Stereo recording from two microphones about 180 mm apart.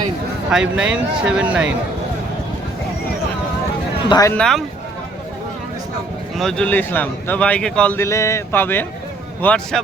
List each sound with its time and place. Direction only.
0.5 s speech: 5° right (ahead or behind)
4.1 s speech: 20° left (ahead or behind)
4.4 s speech: 5° left (ahead or behind)
6.3 s speech: 5° left (ahead or behind)